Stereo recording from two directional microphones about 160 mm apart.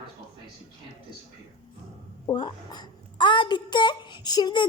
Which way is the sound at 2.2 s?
25° left (ahead or behind).